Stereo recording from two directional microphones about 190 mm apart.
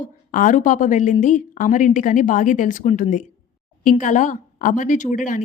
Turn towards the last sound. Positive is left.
turn(degrees=40)  # may be behind; listen again after turning